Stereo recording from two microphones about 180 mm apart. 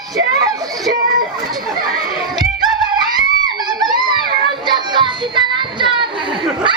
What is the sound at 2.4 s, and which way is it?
Music, 25° right (ahead or behind).